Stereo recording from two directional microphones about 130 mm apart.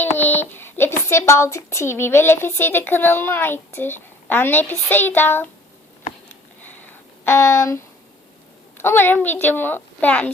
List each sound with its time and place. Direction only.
0.0 s speech: 15° left (ahead or behind)
7.3 s speech: 20° left (ahead or behind)
8.8 s a woman's voice: 15° left (ahead or behind)